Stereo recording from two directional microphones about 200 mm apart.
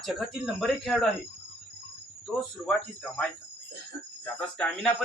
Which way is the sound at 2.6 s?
5° left (ahead or behind).